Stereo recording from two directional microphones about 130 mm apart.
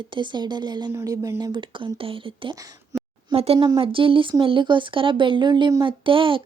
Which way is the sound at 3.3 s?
50° right (ahead or behind).